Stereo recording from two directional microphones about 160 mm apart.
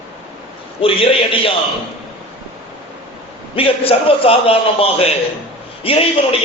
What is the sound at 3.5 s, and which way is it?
A man's voice, 35° left (ahead or behind).